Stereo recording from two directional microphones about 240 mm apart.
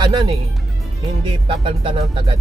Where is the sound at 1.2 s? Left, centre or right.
Right.